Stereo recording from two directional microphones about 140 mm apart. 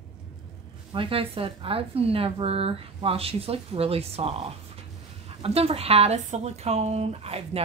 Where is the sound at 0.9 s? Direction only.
40° right (ahead or behind).